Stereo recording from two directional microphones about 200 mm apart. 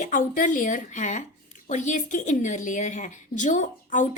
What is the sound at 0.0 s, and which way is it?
A woman's voice, 40° left (ahead or behind).